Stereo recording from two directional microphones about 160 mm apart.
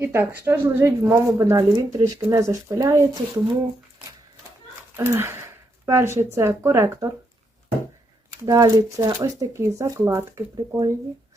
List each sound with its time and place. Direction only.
0.0 s speech: 15° right (ahead or behind)
4.9 s a sound: 15° right (ahead or behind)
6.3 s speech: 15° right (ahead or behind)
8.3 s speech: 20° right (ahead or behind)